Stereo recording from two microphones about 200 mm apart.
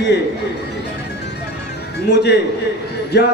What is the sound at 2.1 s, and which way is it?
A man's voice, 55° left (ahead or behind).